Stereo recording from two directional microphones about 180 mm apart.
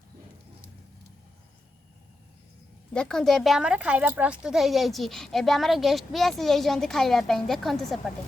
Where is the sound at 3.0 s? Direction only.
5° left (ahead or behind).